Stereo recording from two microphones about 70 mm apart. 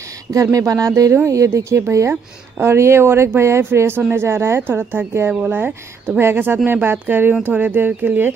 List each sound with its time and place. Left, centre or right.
0.3 s a woman's voice: right